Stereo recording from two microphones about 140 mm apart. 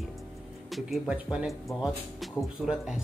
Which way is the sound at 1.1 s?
5° right (ahead or behind).